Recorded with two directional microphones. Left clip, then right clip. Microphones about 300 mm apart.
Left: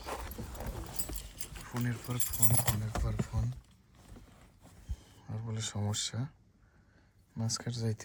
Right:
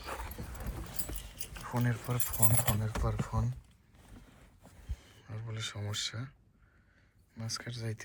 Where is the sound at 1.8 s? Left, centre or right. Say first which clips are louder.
Right 2 dB; centre.